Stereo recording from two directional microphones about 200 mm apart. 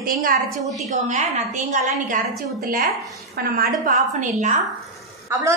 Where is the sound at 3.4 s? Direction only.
45° right (ahead or behind).